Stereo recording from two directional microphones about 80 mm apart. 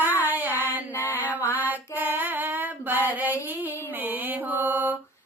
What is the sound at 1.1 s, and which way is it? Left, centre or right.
Music, right.